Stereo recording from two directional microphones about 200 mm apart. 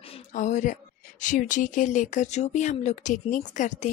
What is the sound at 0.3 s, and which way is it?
Speech, 40° left (ahead or behind).